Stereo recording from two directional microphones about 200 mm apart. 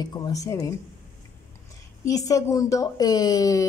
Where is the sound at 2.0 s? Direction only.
15° left (ahead or behind).